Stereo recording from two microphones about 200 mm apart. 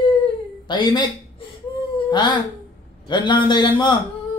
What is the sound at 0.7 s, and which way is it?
Speech, 20° left (ahead or behind).